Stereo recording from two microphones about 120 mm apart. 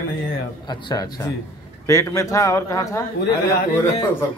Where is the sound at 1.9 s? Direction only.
25° left (ahead or behind).